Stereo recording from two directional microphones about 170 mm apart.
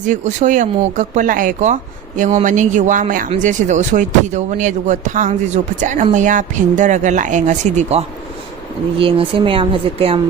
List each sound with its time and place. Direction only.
0.0 s speech: 45° right (ahead or behind)